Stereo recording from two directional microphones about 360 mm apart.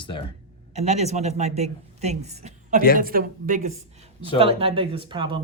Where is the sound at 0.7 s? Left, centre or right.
Centre.